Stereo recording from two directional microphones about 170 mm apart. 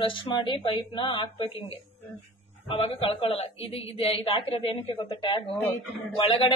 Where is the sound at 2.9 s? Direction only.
25° left (ahead or behind).